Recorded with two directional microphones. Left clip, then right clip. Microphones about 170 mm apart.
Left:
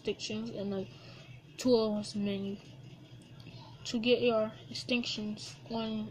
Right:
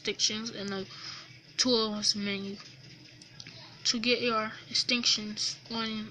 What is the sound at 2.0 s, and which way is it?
Speech, 75° right (ahead or behind).